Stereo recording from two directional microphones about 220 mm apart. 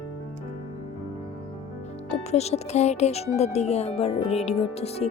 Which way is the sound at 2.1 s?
30° left (ahead or behind).